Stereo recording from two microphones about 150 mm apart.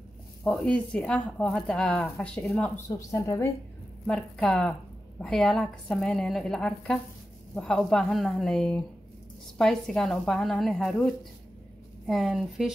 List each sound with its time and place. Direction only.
0.4 s speech: 5° left (ahead or behind)
3.0 s speech: 20° left (ahead or behind)
4.1 s a woman's voice: 5° left (ahead or behind)
12.1 s a woman's voice: centre (ahead or behind)